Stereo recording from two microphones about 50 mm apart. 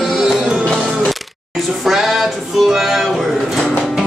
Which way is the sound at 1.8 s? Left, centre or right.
Centre.